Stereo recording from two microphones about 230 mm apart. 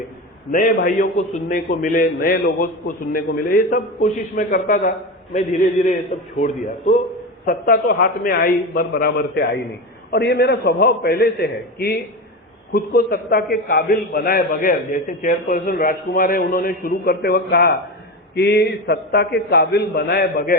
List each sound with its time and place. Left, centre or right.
0.5 s a man's voice: left